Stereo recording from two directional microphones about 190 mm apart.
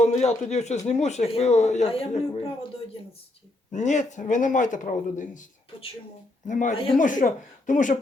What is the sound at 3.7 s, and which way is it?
Speech, 40° left (ahead or behind).